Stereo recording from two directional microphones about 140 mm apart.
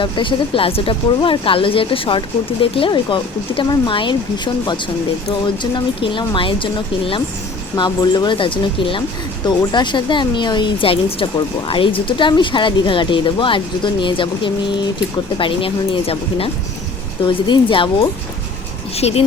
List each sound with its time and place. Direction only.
0.0 s speech: 35° left (ahead or behind)
18.9 s speech: 45° left (ahead or behind)